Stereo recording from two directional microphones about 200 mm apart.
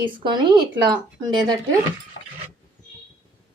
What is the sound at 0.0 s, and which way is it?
Speech, 20° right (ahead or behind).